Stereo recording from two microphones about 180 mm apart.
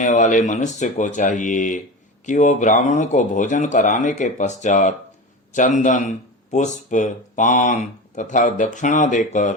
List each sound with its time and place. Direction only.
0.0 s speech: 45° left (ahead or behind)